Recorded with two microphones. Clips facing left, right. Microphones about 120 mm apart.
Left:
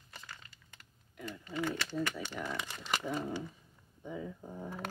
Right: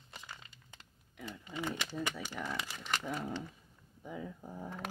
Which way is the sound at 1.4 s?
15° right (ahead or behind).